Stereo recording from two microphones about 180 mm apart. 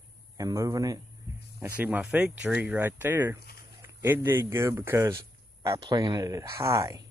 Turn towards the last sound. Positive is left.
turn(degrees=-15)  # may be behind; listen again after turning